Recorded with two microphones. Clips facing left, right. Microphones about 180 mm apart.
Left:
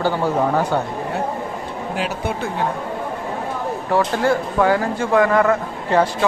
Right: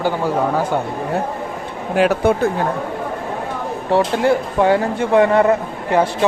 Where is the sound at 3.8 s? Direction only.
25° right (ahead or behind).